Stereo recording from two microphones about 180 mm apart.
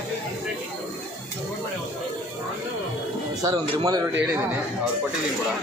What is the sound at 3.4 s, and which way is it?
Speech, 20° right (ahead or behind).